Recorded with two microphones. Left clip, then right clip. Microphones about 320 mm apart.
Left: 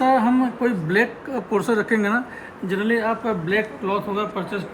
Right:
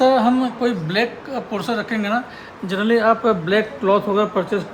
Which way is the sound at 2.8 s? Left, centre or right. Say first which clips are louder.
Right 7 dB; centre.